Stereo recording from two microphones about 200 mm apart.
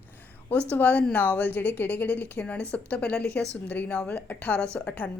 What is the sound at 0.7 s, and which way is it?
A woman's voice, 10° left (ahead or behind).